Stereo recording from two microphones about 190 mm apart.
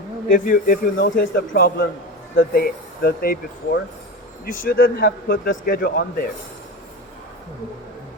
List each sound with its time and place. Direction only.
0.3 s a man's voice: 45° left (ahead or behind)